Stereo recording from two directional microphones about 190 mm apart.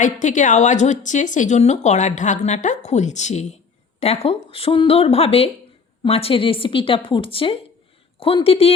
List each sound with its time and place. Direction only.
0.0 s a woman's voice: 40° left (ahead or behind)